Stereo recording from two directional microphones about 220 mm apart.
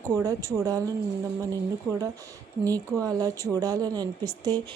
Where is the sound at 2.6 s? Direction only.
15° right (ahead or behind).